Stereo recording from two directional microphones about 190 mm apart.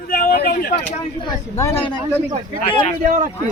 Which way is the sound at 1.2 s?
15° left (ahead or behind).